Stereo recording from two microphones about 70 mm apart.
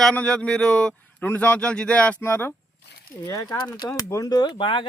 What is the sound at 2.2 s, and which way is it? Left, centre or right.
Speech, left.